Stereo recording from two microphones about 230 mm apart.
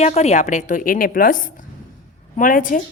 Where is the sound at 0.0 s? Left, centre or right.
Left.